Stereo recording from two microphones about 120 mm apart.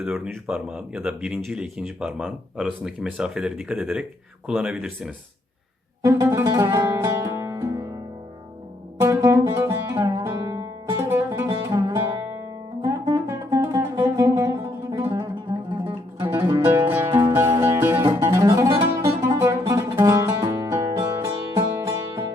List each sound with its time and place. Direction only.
0.0 s speech: 5° right (ahead or behind)
6.0 s music: 25° right (ahead or behind)
9.0 s music: 25° right (ahead or behind)